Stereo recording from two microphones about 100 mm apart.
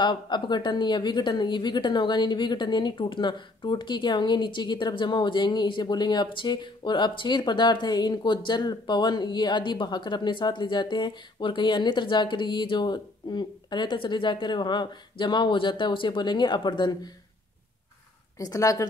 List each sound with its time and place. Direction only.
0.0 s a woman's voice: 50° left (ahead or behind)
18.4 s speech: 35° left (ahead or behind)